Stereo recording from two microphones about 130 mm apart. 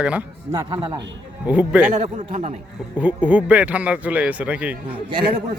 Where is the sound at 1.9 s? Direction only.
55° right (ahead or behind).